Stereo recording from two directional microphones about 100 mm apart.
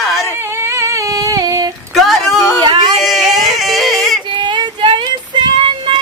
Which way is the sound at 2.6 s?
45° right (ahead or behind).